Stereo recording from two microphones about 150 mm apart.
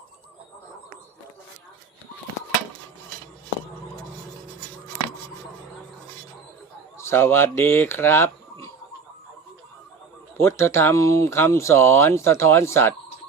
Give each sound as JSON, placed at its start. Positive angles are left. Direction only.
{"t": 7.0, "sound": "speech", "side_deg": 15}
{"t": 10.3, "sound": "speech", "side_deg": 20}